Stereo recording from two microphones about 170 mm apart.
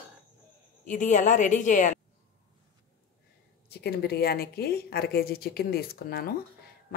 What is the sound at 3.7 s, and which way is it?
A woman's voice, 70° left (ahead or behind).